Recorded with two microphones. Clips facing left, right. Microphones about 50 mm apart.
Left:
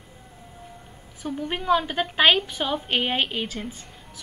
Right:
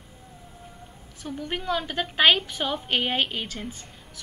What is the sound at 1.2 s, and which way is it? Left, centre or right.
A woman's voice, centre.